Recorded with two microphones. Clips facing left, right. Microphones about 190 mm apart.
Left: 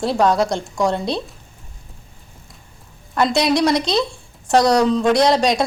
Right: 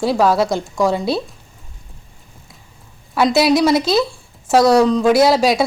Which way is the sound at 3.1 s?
5° right (ahead or behind).